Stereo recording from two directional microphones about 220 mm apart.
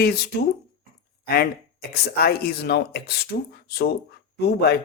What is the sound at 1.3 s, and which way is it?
Speech, 45° left (ahead or behind).